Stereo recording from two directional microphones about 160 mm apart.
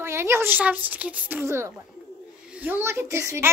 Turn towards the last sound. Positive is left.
turn(degrees=-15)  # may be behind; listen again after turning